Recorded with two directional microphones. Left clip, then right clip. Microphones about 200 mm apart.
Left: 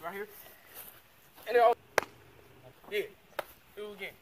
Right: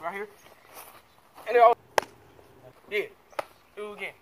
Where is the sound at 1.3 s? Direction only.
15° left (ahead or behind).